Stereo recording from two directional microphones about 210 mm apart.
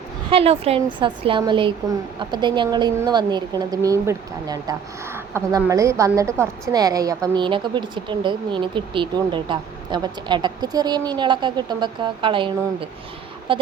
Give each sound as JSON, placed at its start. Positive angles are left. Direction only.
{"t": 0.3, "sound": "a woman's voice", "side_deg": -30}